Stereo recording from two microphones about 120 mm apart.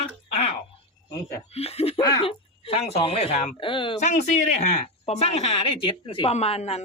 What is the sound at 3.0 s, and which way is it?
Speech, 55° left (ahead or behind).